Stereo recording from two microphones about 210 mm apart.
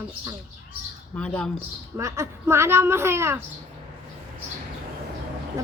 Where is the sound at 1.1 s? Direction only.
5° left (ahead or behind).